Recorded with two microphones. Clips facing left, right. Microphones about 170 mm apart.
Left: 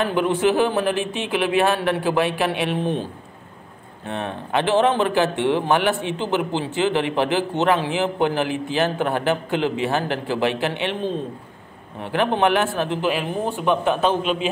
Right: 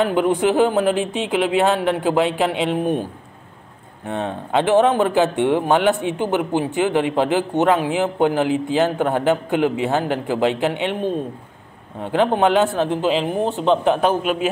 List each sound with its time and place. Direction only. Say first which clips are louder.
0.0 s a man's voice: right 2 dB; 20° right (ahead or behind)
4.1 s a man's voice: right 3 dB; 20° right (ahead or behind)
12.0 s a man's voice: right 3 dB; 20° right (ahead or behind)